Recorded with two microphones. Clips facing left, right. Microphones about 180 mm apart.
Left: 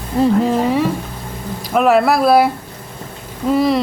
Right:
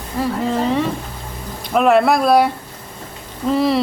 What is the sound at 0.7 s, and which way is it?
A woman's voice, 10° left (ahead or behind).